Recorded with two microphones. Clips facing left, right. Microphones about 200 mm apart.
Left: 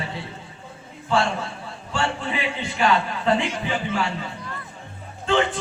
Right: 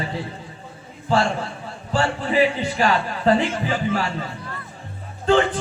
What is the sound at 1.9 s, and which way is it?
A man's voice, 35° right (ahead or behind).